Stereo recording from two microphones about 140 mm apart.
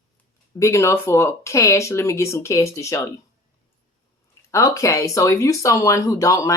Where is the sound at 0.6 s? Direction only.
20° left (ahead or behind).